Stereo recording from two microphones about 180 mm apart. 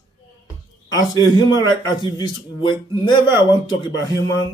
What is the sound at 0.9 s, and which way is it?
A man's voice, 20° left (ahead or behind).